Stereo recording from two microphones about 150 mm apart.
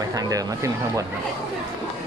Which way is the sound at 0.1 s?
25° right (ahead or behind).